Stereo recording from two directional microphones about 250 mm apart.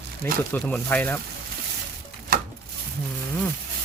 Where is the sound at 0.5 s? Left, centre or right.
Centre.